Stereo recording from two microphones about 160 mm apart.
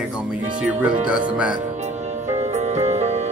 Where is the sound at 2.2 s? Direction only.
45° right (ahead or behind).